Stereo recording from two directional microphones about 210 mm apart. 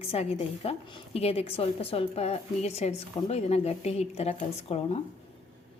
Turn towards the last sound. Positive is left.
turn(degrees=30)  # may be behind; listen again after turning